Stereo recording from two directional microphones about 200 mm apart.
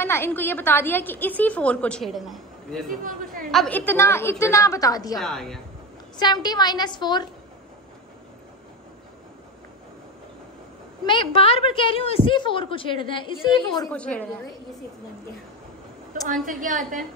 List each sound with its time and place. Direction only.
0.0 s a woman's voice: 10° left (ahead or behind)
2.9 s speech: 45° right (ahead or behind)
3.5 s a woman's voice: 5° left (ahead or behind)
5.2 s speech: centre (ahead or behind)
6.1 s a woman's voice: 20° left (ahead or behind)
11.1 s a woman's voice: 25° left (ahead or behind)
13.8 s a woman's voice: 5° left (ahead or behind)
16.3 s a woman's voice: 40° right (ahead or behind)